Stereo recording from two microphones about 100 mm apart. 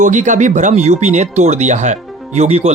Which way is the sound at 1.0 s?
90° right.